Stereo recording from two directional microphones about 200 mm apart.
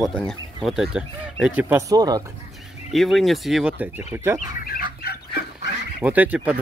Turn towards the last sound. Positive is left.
turn(degrees=-5)  # may be behind; listen again after turning